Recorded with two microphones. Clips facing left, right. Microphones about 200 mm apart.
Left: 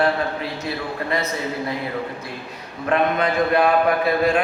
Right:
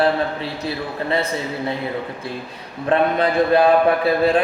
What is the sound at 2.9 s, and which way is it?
Speech, 30° right (ahead or behind).